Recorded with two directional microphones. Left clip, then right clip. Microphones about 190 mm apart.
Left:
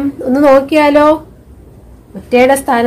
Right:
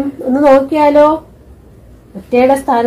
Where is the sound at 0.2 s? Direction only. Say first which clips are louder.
Even; 30° left (ahead or behind).